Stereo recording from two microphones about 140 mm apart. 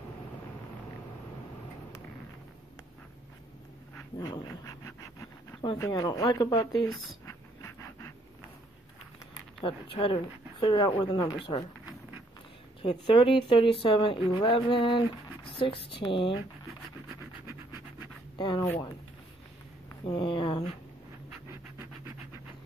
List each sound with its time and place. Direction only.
4.2 s speech: 25° left (ahead or behind)
7.2 s a sound: 20° left (ahead or behind)
9.6 s speech: 40° left (ahead or behind)
12.8 s speech: 40° left (ahead or behind)
18.4 s speech: 35° left (ahead or behind)
20.1 s speech: 40° left (ahead or behind)